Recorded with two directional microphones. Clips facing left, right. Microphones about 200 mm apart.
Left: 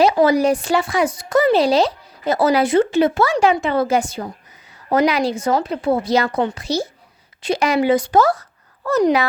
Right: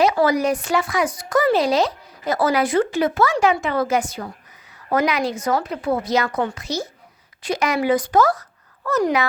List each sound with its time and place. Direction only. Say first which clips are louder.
0.0 s speech: left 3 dB; 30° left (ahead or behind)